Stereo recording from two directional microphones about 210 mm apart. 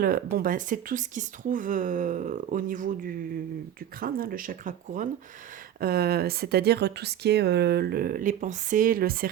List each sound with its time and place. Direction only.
0.0 s speech: 45° right (ahead or behind)